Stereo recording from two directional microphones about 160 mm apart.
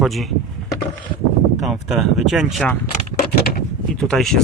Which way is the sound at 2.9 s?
50° left (ahead or behind).